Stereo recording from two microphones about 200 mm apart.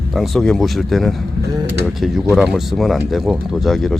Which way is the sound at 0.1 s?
Centre (ahead or behind).